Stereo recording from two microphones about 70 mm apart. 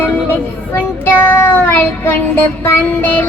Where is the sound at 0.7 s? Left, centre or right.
Left.